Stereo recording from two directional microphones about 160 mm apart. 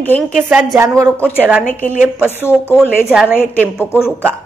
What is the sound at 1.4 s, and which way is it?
Speech, 5° right (ahead or behind).